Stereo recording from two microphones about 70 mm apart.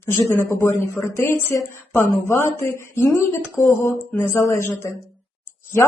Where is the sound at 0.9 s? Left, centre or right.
Left.